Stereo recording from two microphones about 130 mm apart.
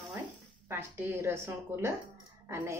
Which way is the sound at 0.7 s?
20° right (ahead or behind).